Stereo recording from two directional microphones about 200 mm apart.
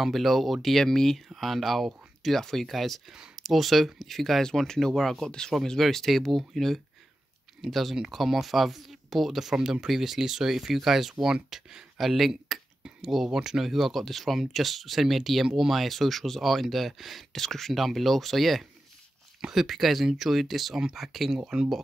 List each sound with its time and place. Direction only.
0.0 s speech: centre (ahead or behind)